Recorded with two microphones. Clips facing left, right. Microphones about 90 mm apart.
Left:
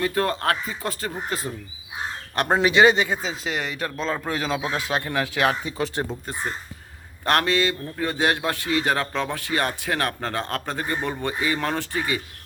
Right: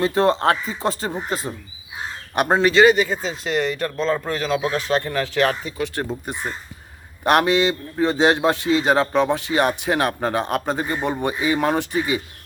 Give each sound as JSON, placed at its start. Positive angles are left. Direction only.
{"t": 0.0, "sound": "a man's voice", "side_deg": -25}
{"t": 2.5, "sound": "speech", "side_deg": 10}
{"t": 2.8, "sound": "speech", "side_deg": 20}
{"t": 3.2, "sound": "speech", "side_deg": 0}
{"t": 4.4, "sound": "speech", "side_deg": 15}
{"t": 7.3, "sound": "a man's voice", "side_deg": -20}